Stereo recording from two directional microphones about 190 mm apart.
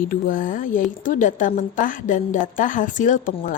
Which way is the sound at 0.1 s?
45° left (ahead or behind).